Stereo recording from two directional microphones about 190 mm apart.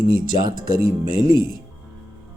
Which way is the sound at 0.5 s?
50° right (ahead or behind).